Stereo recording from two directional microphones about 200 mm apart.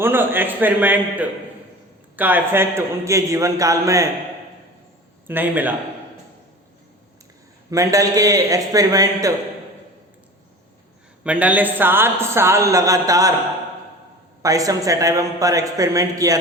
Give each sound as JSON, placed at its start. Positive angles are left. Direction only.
{"t": 0.0, "sound": "a woman's voice", "side_deg": -10}
{"t": 5.3, "sound": "a woman's voice", "side_deg": -10}
{"t": 7.7, "sound": "a woman's voice", "side_deg": -15}
{"t": 11.2, "sound": "a woman's voice", "side_deg": -5}
{"t": 14.4, "sound": "a woman's voice", "side_deg": -15}